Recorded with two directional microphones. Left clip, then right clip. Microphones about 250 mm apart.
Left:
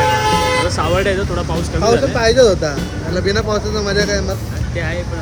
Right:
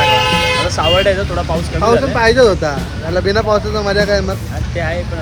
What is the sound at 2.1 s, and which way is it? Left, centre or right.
Speech, right.